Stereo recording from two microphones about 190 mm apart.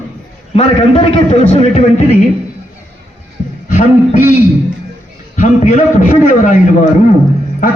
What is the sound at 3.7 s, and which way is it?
Speech, 40° left (ahead or behind).